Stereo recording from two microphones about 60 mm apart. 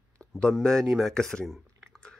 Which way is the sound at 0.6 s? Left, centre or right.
Centre.